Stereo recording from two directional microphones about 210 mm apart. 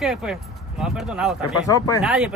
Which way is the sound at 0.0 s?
Centre (ahead or behind).